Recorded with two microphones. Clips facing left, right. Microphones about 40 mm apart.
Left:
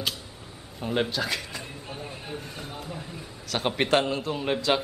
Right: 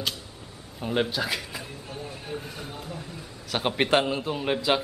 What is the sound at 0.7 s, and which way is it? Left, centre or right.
Speech, centre.